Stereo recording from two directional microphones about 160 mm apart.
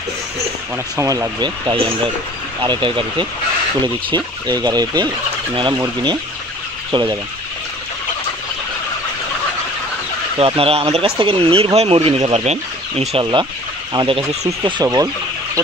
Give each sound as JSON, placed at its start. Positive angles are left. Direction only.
{"t": 0.9, "sound": "speech", "side_deg": -20}
{"t": 10.4, "sound": "speech", "side_deg": -35}
{"t": 13.2, "sound": "speech", "side_deg": -30}